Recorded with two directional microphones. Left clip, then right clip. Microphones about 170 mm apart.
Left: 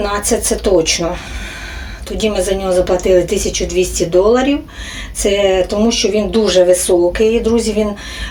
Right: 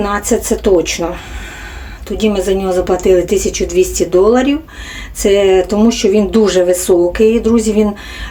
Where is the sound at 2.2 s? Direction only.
10° right (ahead or behind).